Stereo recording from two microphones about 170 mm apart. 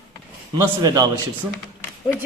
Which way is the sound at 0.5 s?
25° right (ahead or behind).